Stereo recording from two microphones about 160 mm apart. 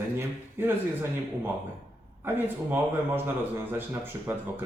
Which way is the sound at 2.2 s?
10° right (ahead or behind).